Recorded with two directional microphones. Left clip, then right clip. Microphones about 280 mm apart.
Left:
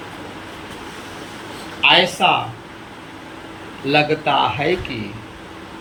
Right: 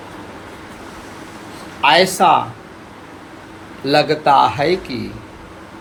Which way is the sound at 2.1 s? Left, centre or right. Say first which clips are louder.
Right 4 dB; right.